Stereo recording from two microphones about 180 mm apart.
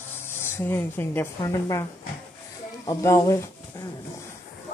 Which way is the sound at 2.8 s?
15° left (ahead or behind).